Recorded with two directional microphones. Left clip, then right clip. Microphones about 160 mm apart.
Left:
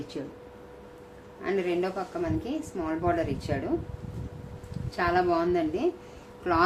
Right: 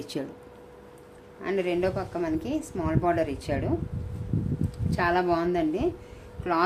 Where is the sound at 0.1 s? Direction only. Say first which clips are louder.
Right 4 dB; 90° right.